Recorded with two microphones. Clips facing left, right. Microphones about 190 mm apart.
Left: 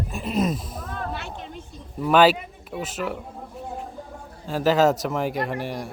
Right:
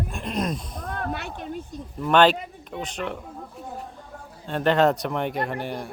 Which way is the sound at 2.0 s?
5° left (ahead or behind).